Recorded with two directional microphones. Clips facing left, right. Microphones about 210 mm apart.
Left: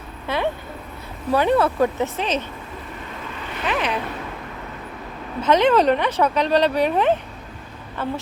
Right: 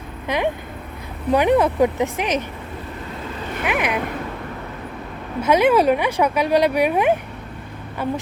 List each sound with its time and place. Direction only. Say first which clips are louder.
0.3 s speech: right 2 dB; 15° right (ahead or behind)
3.6 s speech: right 1 dB; 10° right (ahead or behind)
5.4 s speech: right 1 dB; 10° right (ahead or behind)